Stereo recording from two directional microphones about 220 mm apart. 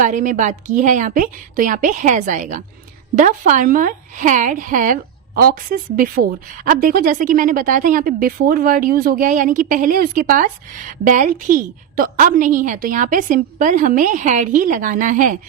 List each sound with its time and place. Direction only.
0.0 s speech: 35° right (ahead or behind)